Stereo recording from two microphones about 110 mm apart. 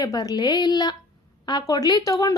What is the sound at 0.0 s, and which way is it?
A woman's voice, 35° left (ahead or behind).